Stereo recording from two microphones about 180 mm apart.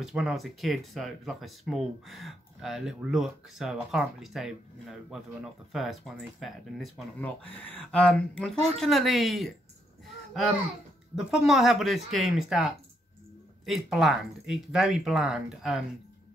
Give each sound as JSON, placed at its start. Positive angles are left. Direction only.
{"t": 0.0, "sound": "speech", "side_deg": -5}
{"t": 11.1, "sound": "speech", "side_deg": 0}